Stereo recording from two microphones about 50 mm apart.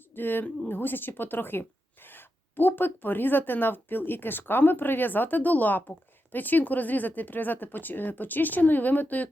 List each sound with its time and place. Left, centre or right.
0.1 s a woman's voice: left